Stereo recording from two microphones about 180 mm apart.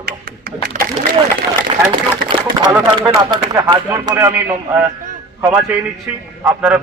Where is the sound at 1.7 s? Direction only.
30° right (ahead or behind).